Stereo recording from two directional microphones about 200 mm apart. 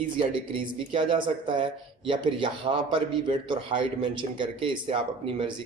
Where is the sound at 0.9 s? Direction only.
25° right (ahead or behind).